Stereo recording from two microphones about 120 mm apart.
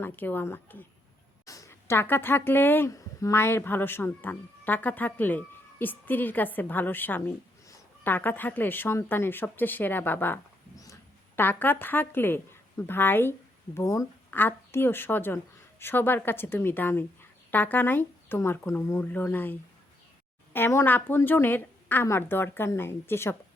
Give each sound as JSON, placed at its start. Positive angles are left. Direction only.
{"t": 0.0, "sound": "speech", "side_deg": 15}
{"t": 2.9, "sound": "speech", "side_deg": 30}